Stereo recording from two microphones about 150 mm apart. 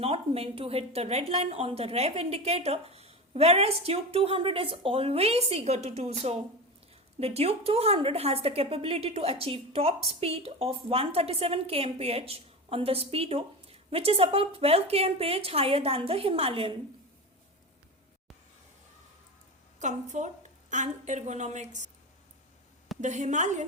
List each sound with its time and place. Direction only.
0.0 s a woman's voice: 40° right (ahead or behind)
19.8 s a woman's voice: 55° right (ahead or behind)
23.0 s a woman's voice: 50° right (ahead or behind)